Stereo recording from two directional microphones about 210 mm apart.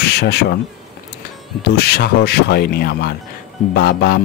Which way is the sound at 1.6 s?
50° left (ahead or behind).